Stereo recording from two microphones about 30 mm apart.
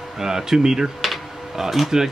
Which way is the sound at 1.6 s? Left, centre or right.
Centre.